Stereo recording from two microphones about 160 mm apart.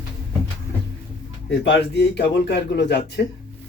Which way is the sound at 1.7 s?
90° left.